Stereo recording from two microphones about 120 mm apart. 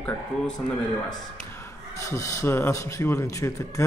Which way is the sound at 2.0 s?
25° left (ahead or behind).